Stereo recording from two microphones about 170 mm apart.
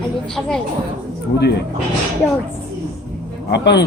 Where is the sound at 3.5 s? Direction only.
85° left.